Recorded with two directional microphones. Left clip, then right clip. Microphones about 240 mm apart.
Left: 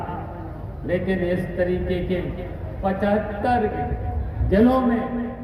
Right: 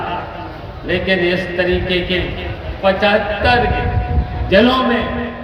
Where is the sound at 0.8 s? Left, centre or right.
Right.